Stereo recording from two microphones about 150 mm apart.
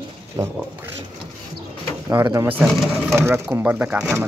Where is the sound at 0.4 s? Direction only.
20° right (ahead or behind).